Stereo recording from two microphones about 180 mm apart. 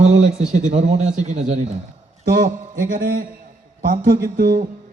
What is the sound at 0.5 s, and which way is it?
Speech, 40° right (ahead or behind).